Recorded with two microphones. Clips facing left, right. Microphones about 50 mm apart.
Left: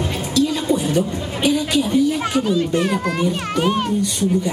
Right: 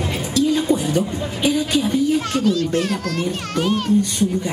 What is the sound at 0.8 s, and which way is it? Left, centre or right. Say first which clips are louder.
Speech: left 1 dB; left.